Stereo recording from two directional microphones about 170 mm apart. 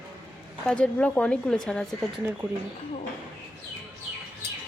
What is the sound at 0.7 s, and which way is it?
Speech, 10° left (ahead or behind).